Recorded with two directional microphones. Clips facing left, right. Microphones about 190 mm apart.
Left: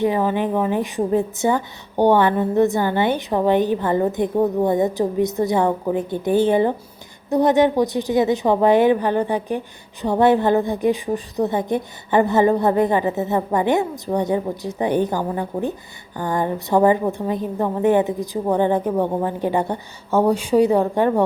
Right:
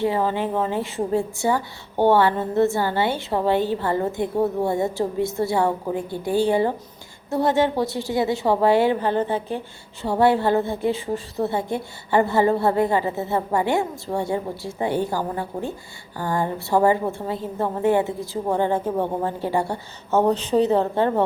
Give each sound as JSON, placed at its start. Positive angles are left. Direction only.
{"t": 0.0, "sound": "a woman's voice", "side_deg": 15}